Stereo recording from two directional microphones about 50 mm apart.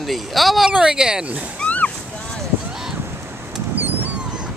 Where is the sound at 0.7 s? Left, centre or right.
Centre.